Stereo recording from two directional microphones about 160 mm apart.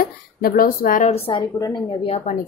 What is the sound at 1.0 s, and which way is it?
A woman's voice, 35° left (ahead or behind).